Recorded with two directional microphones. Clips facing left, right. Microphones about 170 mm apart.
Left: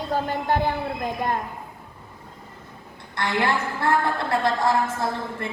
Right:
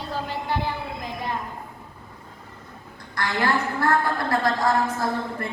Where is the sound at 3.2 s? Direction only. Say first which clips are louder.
Even; 25° left (ahead or behind).